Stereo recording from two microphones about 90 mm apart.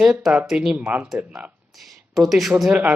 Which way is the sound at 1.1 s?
15° right (ahead or behind).